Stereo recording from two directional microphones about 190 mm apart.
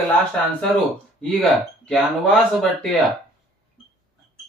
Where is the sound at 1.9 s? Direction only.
5° left (ahead or behind).